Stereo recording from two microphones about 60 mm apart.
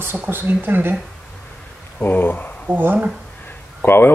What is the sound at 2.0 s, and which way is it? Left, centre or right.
Speech, left.